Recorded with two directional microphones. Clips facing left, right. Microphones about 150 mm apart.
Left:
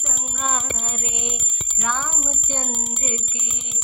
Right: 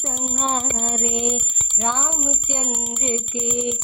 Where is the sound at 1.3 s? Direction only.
25° right (ahead or behind).